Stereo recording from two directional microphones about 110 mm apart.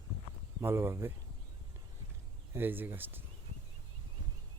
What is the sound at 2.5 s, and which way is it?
Speech, 20° right (ahead or behind).